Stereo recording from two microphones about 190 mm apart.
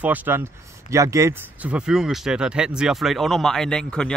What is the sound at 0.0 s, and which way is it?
Speech, 10° right (ahead or behind).